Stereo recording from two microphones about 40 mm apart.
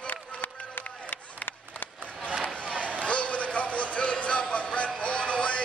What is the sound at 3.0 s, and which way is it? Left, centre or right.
Music, left.